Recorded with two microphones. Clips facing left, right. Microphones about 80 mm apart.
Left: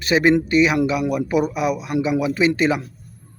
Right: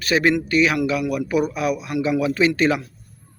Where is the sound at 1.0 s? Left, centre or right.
Left.